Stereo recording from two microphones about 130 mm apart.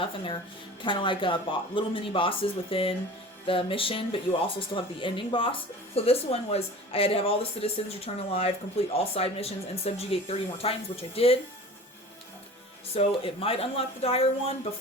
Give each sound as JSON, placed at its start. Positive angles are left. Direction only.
{"t": 0.0, "sound": "speech", "side_deg": 40}
{"t": 12.9, "sound": "speech", "side_deg": 45}